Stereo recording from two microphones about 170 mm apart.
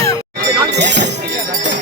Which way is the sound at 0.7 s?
90° right.